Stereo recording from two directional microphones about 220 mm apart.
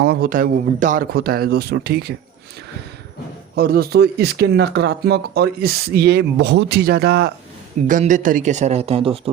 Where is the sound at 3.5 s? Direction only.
45° right (ahead or behind).